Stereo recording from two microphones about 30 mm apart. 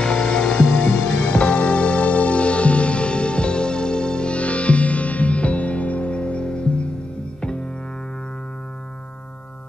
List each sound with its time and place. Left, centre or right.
0.0 s music: left
0.7 s music: left
4.4 s music: left